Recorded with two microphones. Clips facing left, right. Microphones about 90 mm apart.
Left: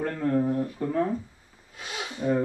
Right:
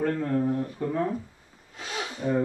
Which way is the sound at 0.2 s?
10° left (ahead or behind).